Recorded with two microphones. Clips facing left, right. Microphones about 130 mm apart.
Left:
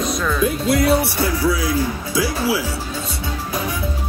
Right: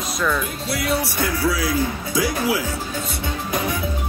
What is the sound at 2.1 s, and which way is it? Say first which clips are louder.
Speech: left 1 dB; 20° right (ahead or behind).